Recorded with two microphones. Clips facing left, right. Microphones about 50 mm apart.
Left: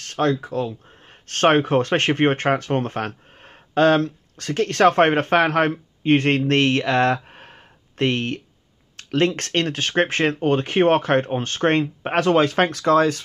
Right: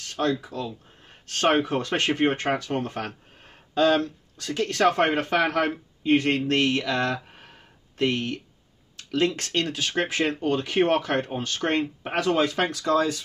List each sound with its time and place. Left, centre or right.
0.0 s speech: left
7.2 s a sound: left
8.9 s speech: left